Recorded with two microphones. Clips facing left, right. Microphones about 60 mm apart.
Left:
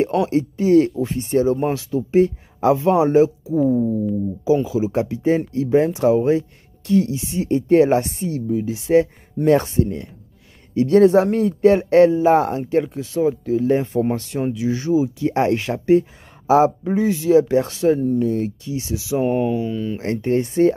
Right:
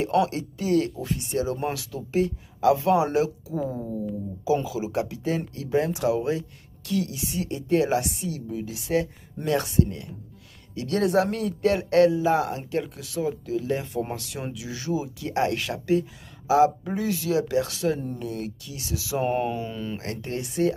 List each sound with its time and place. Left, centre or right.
0.0 s speech: left
4.6 s speech: left
8.5 s speech: left
16.8 s speech: left
19.2 s speech: centre
20.0 s speech: left